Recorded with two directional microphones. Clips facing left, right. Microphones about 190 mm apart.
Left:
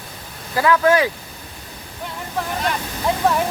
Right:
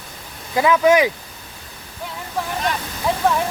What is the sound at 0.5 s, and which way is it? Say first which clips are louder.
Speech: right 1 dB; 20° right (ahead or behind).